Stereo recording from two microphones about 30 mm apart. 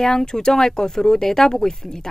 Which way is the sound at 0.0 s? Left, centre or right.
Centre.